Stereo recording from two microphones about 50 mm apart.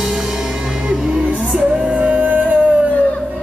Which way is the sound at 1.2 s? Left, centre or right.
Right.